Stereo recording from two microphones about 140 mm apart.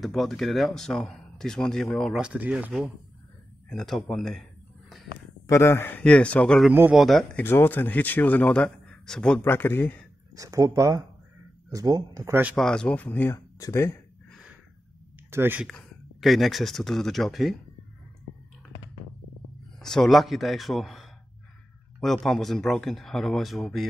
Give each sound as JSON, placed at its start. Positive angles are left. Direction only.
{"t": 0.0, "sound": "speech", "side_deg": 0}
{"t": 3.6, "sound": "a sound", "side_deg": 0}
{"t": 5.5, "sound": "a man's voice", "side_deg": 20}
{"t": 6.7, "sound": "speech", "side_deg": -15}
{"t": 7.0, "sound": "speech", "side_deg": 0}
{"t": 7.4, "sound": "a man's voice", "side_deg": 15}
{"t": 10.3, "sound": "speech", "side_deg": -25}
{"t": 12.5, "sound": "a man's voice", "side_deg": 5}
{"t": 15.3, "sound": "speech", "side_deg": -15}
{"t": 15.6, "sound": "speech", "side_deg": 0}
{"t": 19.8, "sound": "speech", "side_deg": 5}